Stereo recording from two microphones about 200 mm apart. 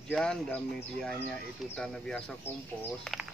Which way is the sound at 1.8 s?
5° left (ahead or behind).